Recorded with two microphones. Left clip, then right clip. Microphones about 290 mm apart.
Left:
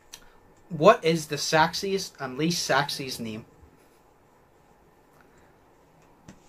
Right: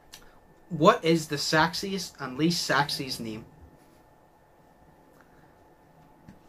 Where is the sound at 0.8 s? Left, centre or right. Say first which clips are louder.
Left 2 dB; centre.